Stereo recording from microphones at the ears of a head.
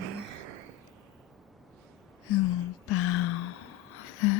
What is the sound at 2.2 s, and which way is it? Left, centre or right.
Gasp, left.